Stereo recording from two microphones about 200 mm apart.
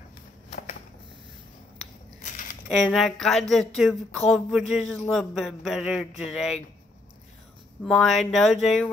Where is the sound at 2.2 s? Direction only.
40° left (ahead or behind).